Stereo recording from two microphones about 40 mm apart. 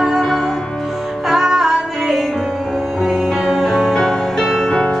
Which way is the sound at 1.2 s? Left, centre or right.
Centre.